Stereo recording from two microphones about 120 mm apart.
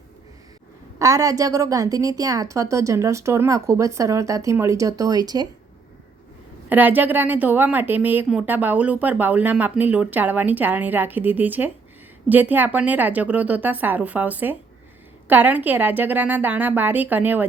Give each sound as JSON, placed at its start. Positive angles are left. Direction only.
{"t": 0.9, "sound": "a woman's voice", "side_deg": -30}
{"t": 6.7, "sound": "speech", "side_deg": -15}